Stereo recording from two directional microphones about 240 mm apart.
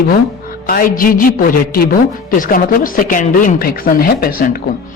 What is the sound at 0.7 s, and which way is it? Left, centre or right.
Speech, left.